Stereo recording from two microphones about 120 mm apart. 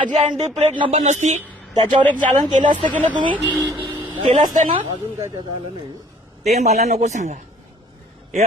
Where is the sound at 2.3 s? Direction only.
90° right.